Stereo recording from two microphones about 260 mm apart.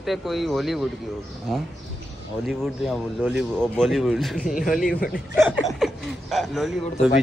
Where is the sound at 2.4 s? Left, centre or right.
Centre.